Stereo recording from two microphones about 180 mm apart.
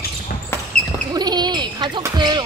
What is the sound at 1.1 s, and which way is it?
Basketball bounce, 25° right (ahead or behind).